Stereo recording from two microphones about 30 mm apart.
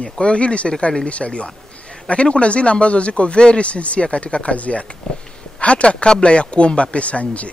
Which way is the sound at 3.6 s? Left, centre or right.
Left.